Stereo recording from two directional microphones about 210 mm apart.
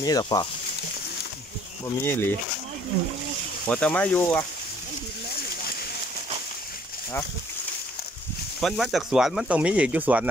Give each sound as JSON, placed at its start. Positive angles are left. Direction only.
{"t": 0.0, "sound": "speech", "side_deg": 20}
{"t": 2.0, "sound": "speech", "side_deg": 10}
{"t": 3.6, "sound": "speech", "side_deg": 5}
{"t": 8.5, "sound": "speech", "side_deg": 0}